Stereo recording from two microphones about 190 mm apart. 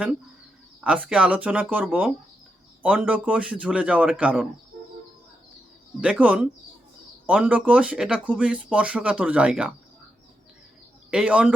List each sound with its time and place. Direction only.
0.9 s speech: 5° right (ahead or behind)
6.0 s speech: 5° right (ahead or behind)
11.1 s speech: 5° right (ahead or behind)